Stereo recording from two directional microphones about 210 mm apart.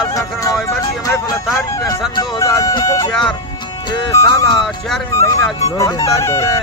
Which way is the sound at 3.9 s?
20° left (ahead or behind).